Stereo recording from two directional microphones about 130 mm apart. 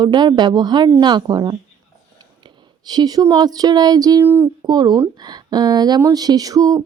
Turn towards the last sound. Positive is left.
turn(degrees=-25)  # may be behind; listen again after turning